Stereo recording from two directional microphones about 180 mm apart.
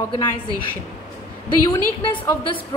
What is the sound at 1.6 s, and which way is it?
Speech, 25° left (ahead or behind).